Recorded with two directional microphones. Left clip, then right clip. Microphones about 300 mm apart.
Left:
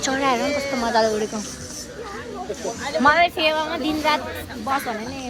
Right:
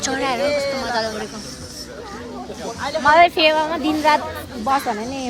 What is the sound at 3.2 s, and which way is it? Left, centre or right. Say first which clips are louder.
Speech: right 5 dB; right.